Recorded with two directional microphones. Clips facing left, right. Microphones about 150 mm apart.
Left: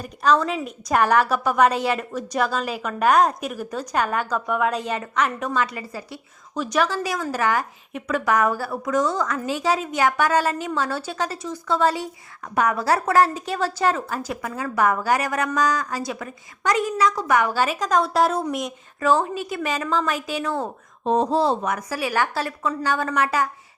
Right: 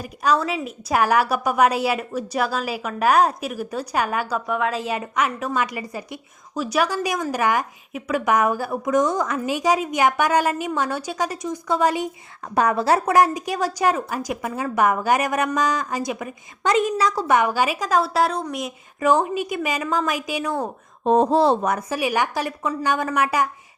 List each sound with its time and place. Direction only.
0.0 s a woman's voice: 10° right (ahead or behind)
8.2 s a woman's voice: 20° right (ahead or behind)
12.5 s a woman's voice: 30° right (ahead or behind)
17.0 s a woman's voice: 35° right (ahead or behind)
17.5 s a woman's voice: 10° right (ahead or behind)
18.9 s a woman's voice: 15° right (ahead or behind)
21.0 s speech: 55° right (ahead or behind)
21.6 s speech: 35° right (ahead or behind)
21.8 s a woman's voice: 15° right (ahead or behind)